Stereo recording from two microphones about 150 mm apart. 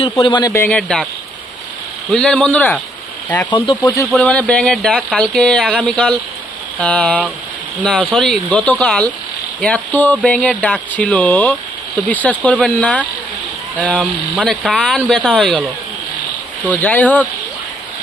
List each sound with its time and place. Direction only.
0.0 s speech: 35° left (ahead or behind)
0.5 s speech: 10° left (ahead or behind)
2.1 s speech: 5° left (ahead or behind)
14.6 s speech: centre (ahead or behind)
16.6 s speech: 10° left (ahead or behind)